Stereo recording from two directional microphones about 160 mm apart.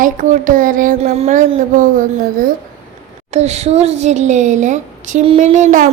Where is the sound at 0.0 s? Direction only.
55° right (ahead or behind).